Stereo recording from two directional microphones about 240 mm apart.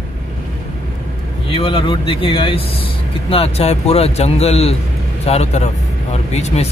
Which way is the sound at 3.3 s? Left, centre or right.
Left.